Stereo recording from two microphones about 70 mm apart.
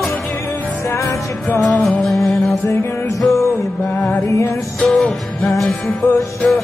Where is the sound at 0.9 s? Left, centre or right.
Left.